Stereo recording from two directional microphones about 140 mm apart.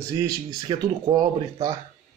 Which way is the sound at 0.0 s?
25° right (ahead or behind).